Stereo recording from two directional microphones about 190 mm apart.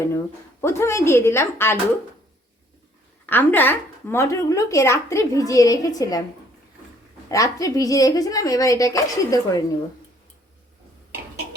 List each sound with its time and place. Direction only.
0.6 s a woman's voice: 15° left (ahead or behind)
3.2 s a woman's voice: 10° left (ahead or behind)
7.3 s speech: 15° left (ahead or behind)